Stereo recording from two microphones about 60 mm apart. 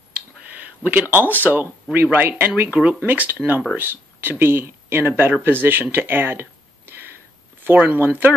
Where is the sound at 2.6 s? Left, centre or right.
Right.